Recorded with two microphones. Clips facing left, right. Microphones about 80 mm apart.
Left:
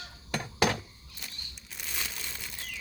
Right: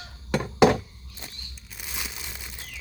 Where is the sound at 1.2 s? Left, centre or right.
Right.